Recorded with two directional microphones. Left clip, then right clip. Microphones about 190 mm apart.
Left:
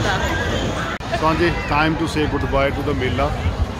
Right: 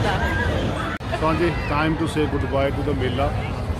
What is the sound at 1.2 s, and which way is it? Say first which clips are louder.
Speech: left 3 dB; 20° left (ahead or behind).